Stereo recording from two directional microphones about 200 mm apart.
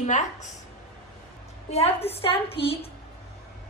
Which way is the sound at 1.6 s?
30° left (ahead or behind).